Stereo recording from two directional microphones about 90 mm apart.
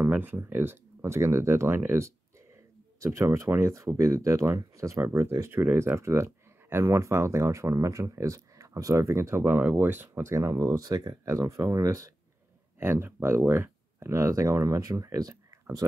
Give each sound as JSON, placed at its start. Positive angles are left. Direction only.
{"t": 0.0, "sound": "speech", "side_deg": -20}
{"t": 9.6, "sound": "speech", "side_deg": -20}
{"t": 11.2, "sound": "speech", "side_deg": -35}